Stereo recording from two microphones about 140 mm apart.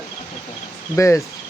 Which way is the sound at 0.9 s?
20° left (ahead or behind).